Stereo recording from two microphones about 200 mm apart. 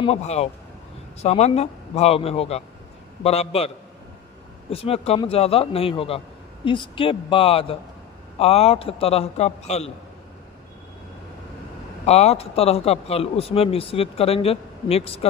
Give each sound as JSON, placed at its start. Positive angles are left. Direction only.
{"t": 0.0, "sound": "a man's voice", "side_deg": 30}
{"t": 12.1, "sound": "a man's voice", "side_deg": 30}